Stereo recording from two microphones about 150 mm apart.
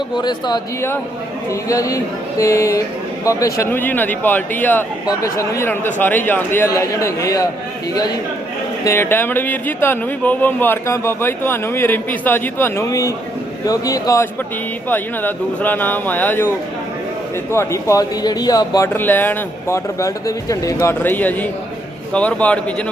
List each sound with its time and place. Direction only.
0.2 s a man's voice: 30° left (ahead or behind)
8.8 s a man's voice: 15° left (ahead or behind)
17.5 s a man's voice: 20° left (ahead or behind)
18.9 s speech: 15° left (ahead or behind)